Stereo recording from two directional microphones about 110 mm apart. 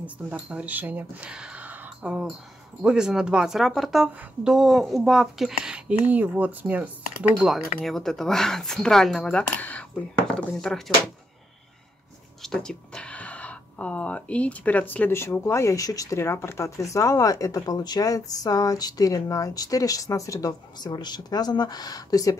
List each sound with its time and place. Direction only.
0.0 s speech: 10° right (ahead or behind)
7.3 s speech: 5° right (ahead or behind)
12.4 s speech: 5° left (ahead or behind); by 22.4 s 35° left (ahead or behind)